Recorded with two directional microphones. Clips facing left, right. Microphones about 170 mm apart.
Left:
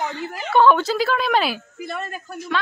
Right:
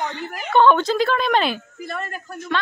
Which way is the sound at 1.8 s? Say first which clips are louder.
Even; 20° left (ahead or behind).